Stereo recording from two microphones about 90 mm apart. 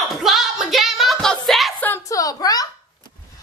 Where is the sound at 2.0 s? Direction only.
40° left (ahead or behind).